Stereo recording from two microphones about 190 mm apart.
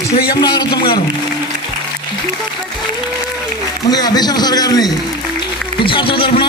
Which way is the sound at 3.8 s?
20° left (ahead or behind).